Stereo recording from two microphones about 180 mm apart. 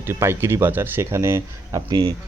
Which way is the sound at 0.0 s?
15° right (ahead or behind).